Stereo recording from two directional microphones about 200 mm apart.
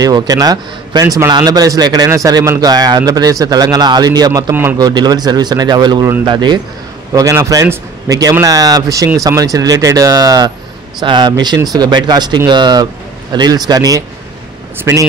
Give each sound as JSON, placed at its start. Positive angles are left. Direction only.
{"t": 0.0, "sound": "a man's voice", "side_deg": -20}